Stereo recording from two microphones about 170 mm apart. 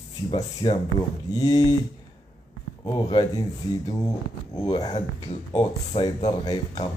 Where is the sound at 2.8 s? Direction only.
25° left (ahead or behind).